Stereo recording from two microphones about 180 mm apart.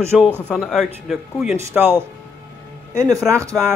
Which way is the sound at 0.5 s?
5° left (ahead or behind).